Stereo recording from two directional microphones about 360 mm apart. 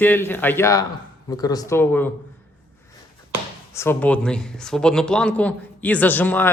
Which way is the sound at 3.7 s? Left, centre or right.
Centre.